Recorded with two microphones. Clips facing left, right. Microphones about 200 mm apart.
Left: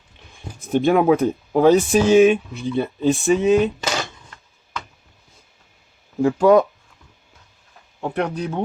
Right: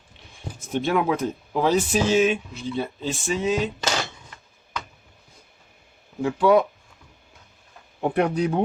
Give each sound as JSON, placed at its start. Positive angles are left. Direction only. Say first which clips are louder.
{"t": 0.7, "sound": "speech", "louder": "left 7 dB", "side_deg": 55}
{"t": 6.2, "sound": "speech", "louder": "left 4 dB", "side_deg": 40}
{"t": 8.0, "sound": "speech", "louder": "right 2 dB", "side_deg": -15}